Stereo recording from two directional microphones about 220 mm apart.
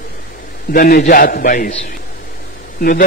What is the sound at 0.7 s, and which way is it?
A man's voice, 40° left (ahead or behind).